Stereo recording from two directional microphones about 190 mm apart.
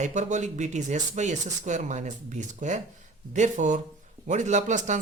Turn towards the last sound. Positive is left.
turn(degrees=-40)  # may be behind; listen again after turning